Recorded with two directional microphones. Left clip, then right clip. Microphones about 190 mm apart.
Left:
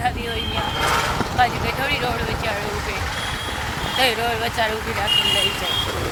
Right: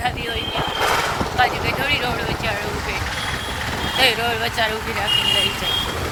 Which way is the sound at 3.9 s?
Centre (ahead or behind).